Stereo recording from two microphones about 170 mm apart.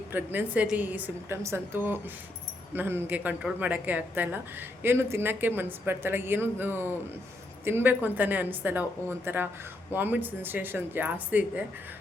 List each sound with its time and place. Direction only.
0.1 s speech: 10° right (ahead or behind)